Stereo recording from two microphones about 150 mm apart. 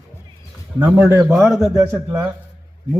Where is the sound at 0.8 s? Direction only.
10° right (ahead or behind).